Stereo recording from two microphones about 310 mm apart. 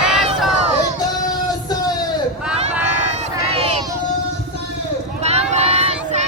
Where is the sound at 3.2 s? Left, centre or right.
Centre.